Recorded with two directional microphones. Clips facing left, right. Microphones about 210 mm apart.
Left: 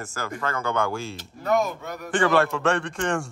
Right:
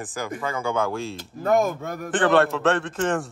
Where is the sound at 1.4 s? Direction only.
50° right (ahead or behind).